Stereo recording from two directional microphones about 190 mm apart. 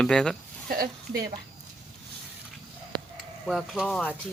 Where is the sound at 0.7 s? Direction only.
50° right (ahead or behind).